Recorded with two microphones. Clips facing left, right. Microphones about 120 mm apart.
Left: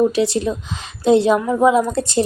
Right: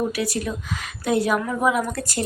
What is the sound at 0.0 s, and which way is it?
A woman's voice, 25° left (ahead or behind).